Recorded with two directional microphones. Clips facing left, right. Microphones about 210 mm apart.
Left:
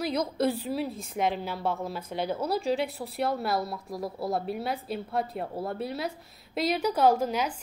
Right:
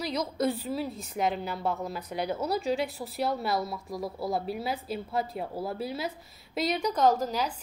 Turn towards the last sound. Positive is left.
turn(degrees=10)  # may be behind; listen again after turning